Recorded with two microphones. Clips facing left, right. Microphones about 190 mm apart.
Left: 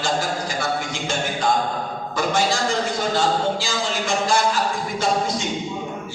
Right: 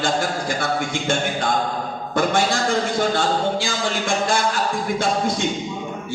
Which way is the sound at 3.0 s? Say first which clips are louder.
Right 1 dB; 55° right (ahead or behind).